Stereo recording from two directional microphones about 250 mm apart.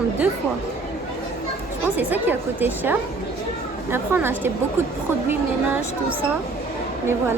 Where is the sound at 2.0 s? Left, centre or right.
Centre.